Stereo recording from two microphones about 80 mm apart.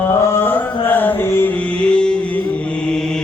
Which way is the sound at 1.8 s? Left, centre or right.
Centre.